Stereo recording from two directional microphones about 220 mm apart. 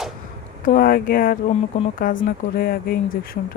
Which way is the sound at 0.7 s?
40° left (ahead or behind).